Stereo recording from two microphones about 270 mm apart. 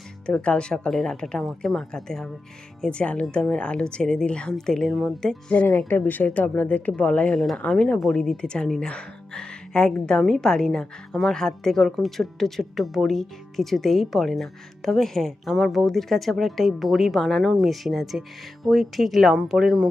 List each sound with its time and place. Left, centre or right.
0.3 s speech: centre